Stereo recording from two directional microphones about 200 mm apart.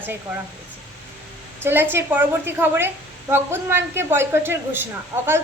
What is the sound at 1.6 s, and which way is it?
A woman's voice, 10° right (ahead or behind).